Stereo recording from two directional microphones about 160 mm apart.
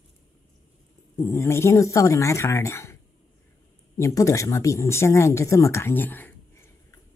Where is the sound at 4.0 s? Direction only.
20° left (ahead or behind).